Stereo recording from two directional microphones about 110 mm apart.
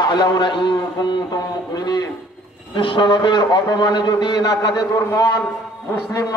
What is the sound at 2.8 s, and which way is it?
A man's voice, 50° left (ahead or behind).